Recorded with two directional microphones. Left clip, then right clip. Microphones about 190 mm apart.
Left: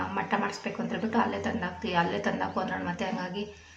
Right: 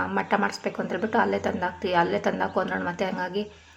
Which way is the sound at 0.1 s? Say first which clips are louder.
Right 5 dB; 25° right (ahead or behind).